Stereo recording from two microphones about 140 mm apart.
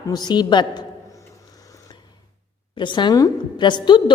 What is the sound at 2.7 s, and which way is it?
A woman's voice, 35° left (ahead or behind).